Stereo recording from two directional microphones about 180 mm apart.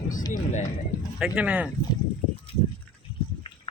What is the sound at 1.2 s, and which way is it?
Speech, 5° right (ahead or behind).